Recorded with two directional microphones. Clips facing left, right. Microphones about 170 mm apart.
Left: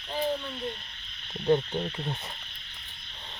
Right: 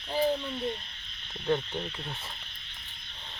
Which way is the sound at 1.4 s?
20° left (ahead or behind).